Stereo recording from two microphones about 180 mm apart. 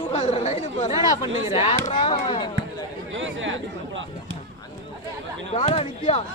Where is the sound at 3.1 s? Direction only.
90° right.